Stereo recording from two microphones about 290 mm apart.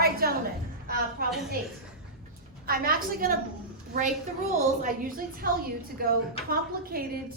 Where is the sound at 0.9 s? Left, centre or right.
Right.